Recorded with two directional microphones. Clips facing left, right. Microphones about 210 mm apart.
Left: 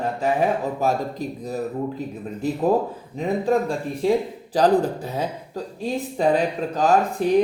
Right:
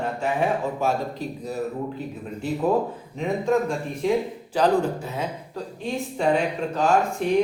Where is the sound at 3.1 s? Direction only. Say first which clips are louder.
Left 1 dB; 35° left (ahead or behind).